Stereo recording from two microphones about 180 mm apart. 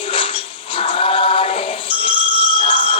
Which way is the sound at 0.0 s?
30° left (ahead or behind).